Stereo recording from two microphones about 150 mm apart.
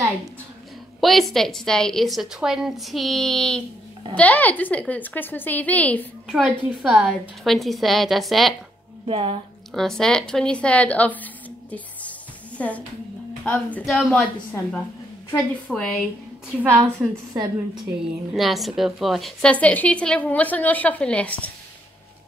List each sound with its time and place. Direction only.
1.0 s a woman's voice: centre (ahead or behind)
6.2 s a woman's voice: 5° right (ahead or behind)
9.0 s speech: 35° right (ahead or behind)
9.8 s a woman's voice: 5° left (ahead or behind)
12.5 s a woman's voice: 10° left (ahead or behind)
13.8 s a woman's voice: centre (ahead or behind)
14.1 s a woman's voice: 10° left (ahead or behind)
18.3 s a woman's voice: centre (ahead or behind)